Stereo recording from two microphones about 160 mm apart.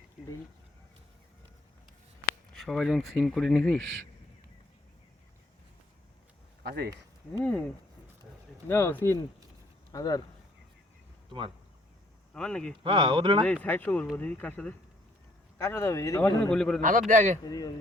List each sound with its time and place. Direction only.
2.5 s speech: centre (ahead or behind)
6.6 s speech: 80° right
8.6 s speech: 15° left (ahead or behind)
11.3 s speech: 30° right (ahead or behind)
12.3 s speech: 5° left (ahead or behind)
12.8 s speech: 35° right (ahead or behind)
13.4 s speech: 10° left (ahead or behind)
16.2 s speech: 5° left (ahead or behind)
16.8 s a man's voice: 55° right (ahead or behind)
17.4 s speech: 25° left (ahead or behind)